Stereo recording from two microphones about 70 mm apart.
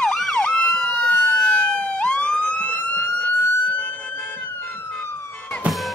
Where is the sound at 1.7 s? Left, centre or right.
Centre.